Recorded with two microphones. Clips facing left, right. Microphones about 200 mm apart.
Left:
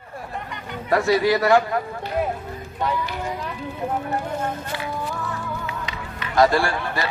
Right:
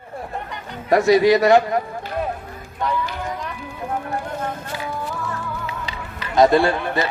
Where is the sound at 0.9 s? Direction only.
20° right (ahead or behind).